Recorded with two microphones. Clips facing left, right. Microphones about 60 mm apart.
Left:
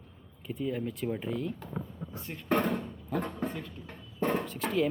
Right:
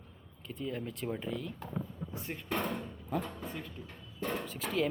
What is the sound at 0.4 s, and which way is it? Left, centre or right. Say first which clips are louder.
A man's voice: left 5 dB; centre.